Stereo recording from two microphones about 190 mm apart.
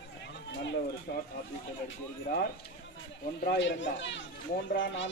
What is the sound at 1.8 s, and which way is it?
Speech, 55° left (ahead or behind).